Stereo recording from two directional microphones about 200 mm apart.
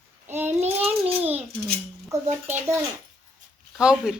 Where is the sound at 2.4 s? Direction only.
15° right (ahead or behind).